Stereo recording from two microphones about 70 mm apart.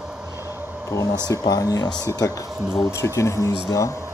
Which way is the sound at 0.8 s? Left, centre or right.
Left.